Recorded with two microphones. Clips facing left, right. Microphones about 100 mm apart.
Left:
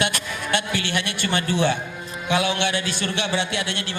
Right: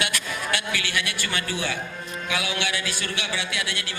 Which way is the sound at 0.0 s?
30° left (ahead or behind).